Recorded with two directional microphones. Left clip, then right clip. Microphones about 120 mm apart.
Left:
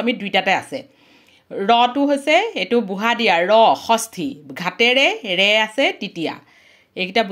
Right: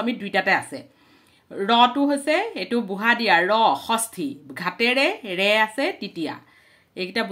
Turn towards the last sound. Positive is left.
turn(degrees=35)  # may be behind; listen again after turning